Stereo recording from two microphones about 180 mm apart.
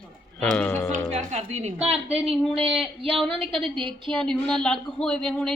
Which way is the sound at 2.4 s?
Centre (ahead or behind).